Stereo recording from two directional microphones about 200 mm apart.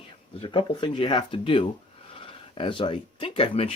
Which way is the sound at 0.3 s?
25° left (ahead or behind).